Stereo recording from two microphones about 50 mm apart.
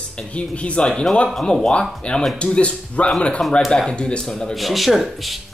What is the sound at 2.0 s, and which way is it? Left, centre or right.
Speech, centre.